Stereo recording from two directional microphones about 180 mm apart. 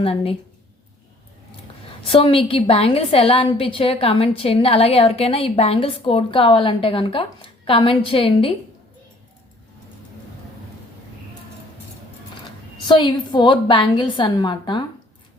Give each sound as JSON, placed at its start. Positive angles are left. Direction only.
{"t": 0.0, "sound": "a woman's voice", "side_deg": 30}
{"t": 2.0, "sound": "a woman's voice", "side_deg": 30}
{"t": 12.9, "sound": "a woman's voice", "side_deg": 25}